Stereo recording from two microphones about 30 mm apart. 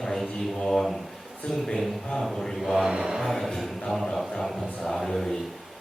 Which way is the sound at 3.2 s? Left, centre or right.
Centre.